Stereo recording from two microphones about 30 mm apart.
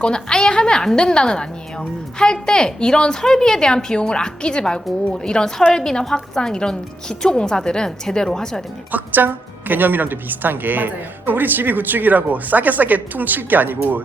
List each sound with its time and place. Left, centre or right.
0.0 s a woman's voice: left
8.9 s a woman's voice: right